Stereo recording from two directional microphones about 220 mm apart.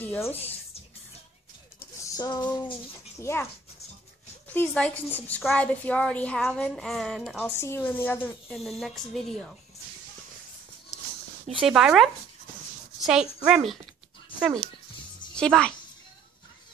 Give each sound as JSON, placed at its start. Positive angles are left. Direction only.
{"t": 0.0, "sound": "speech", "side_deg": 10}
{"t": 1.8, "sound": "a sound", "side_deg": 15}
{"t": 3.2, "sound": "speech", "side_deg": 10}
{"t": 4.6, "sound": "a woman's voice", "side_deg": 5}
{"t": 11.6, "sound": "a woman's voice", "side_deg": 0}
{"t": 15.3, "sound": "a woman's voice", "side_deg": 5}